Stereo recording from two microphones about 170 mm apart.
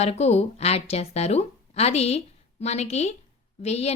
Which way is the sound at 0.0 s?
40° left (ahead or behind).